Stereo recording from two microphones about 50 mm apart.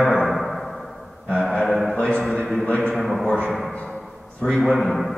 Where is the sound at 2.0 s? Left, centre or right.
Left.